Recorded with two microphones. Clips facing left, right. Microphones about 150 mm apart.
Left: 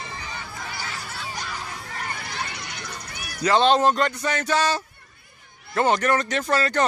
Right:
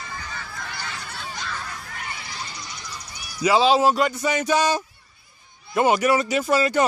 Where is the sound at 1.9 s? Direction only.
40° left (ahead or behind); by 3.4 s 60° left (ahead or behind).